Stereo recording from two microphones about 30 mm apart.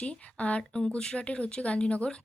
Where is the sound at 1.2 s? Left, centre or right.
Left.